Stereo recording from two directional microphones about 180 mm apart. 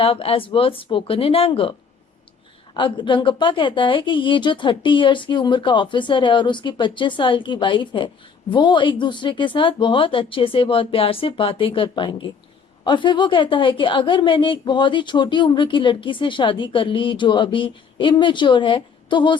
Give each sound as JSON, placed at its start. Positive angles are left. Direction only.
{"t": 0.0, "sound": "speech", "side_deg": 30}
{"t": 2.7, "sound": "a woman's voice", "side_deg": 25}